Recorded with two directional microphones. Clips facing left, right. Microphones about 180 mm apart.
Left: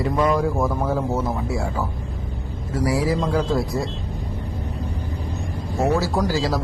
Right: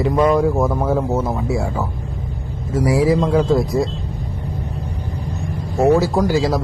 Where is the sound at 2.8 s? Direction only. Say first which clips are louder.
Right 5 dB; 25° right (ahead or behind).